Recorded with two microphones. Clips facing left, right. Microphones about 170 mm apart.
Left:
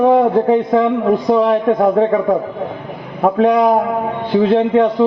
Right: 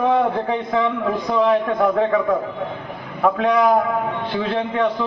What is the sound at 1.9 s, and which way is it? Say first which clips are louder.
Speech: left 5 dB; 40° left (ahead or behind).